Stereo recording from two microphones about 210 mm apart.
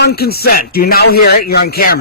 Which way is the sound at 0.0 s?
50° left (ahead or behind).